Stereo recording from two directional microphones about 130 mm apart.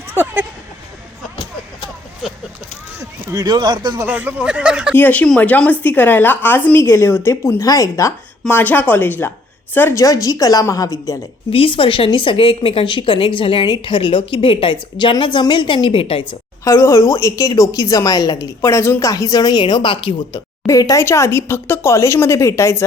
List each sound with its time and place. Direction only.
0.1 s speech: 15° right (ahead or behind)
3.0 s speech: 30° right (ahead or behind)
4.0 s speech: 15° right (ahead or behind)
4.9 s a woman's voice: 15° left (ahead or behind)
11.5 s a woman's voice: 45° left (ahead or behind)
16.6 s a woman's voice: 20° left (ahead or behind); by 20.4 s 40° left (ahead or behind)
20.7 s a woman's voice: 25° left (ahead or behind)